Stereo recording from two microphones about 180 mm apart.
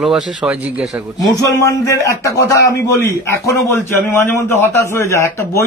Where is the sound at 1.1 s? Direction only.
20° left (ahead or behind).